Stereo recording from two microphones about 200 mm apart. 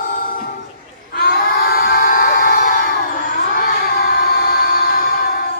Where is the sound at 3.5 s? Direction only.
45° left (ahead or behind).